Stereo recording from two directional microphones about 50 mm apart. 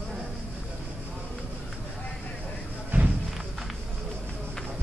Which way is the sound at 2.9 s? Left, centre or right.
Right.